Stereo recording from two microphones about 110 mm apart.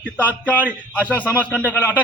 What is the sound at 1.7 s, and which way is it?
Speech, 20° left (ahead or behind).